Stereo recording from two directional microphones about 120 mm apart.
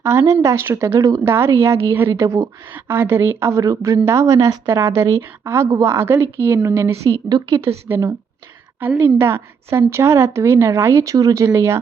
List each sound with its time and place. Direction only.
0.0 s a woman's voice: 20° right (ahead or behind)
7.3 s a woman's voice: 35° right (ahead or behind)
7.9 s a woman's voice: 20° right (ahead or behind)